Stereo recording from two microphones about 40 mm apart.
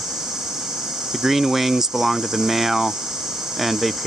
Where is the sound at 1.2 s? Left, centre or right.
Centre.